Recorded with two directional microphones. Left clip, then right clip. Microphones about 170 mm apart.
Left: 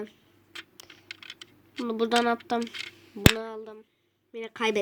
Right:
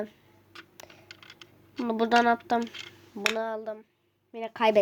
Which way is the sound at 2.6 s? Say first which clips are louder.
Left 2 dB; 20° left (ahead or behind).